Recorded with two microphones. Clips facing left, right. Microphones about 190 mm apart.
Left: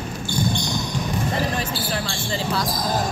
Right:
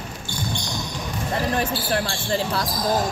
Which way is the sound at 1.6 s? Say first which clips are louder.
Right 3 dB; 55° right (ahead or behind).